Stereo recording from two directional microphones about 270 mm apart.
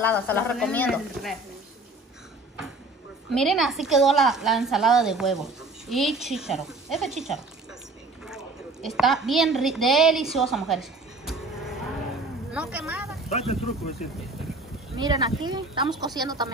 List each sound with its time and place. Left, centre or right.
0.0 s speech: centre
3.3 s a woman's voice: centre
8.8 s a woman's voice: centre
12.5 s speech: centre
13.3 s speech: left
15.0 s speech: centre